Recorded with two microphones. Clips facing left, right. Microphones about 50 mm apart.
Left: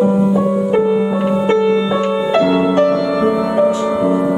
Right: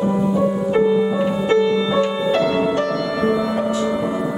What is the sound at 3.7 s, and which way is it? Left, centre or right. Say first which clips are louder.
Music: left 4 dB; left.